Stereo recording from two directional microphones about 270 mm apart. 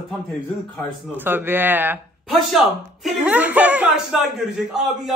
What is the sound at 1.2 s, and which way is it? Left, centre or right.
Speech, centre.